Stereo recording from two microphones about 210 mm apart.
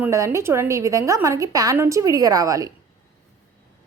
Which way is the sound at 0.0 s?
10° right (ahead or behind).